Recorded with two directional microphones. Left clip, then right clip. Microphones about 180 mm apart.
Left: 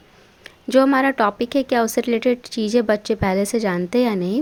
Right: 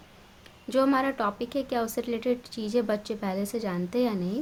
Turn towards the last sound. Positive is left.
turn(degrees=45)  # may be behind; listen again after turning